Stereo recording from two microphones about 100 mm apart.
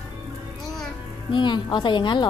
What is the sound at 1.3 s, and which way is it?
Speech, 50° left (ahead or behind).